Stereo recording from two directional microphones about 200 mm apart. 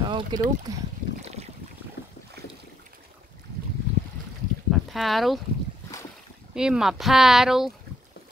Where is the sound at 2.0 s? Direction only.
55° left (ahead or behind).